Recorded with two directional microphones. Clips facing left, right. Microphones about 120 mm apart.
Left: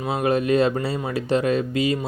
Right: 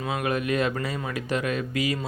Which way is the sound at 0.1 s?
30° left (ahead or behind).